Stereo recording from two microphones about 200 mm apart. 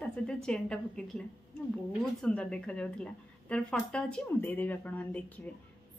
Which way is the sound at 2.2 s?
5° left (ahead or behind).